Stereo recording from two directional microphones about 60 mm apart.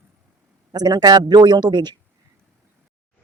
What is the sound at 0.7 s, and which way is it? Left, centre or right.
Speech, right.